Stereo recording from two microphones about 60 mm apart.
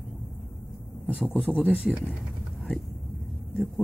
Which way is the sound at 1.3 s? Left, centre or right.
Centre.